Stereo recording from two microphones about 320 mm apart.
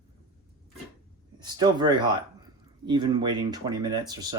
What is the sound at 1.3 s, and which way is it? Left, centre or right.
Speech, centre.